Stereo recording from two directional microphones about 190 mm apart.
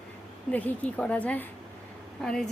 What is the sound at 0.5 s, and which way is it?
A woman's voice, 5° left (ahead or behind).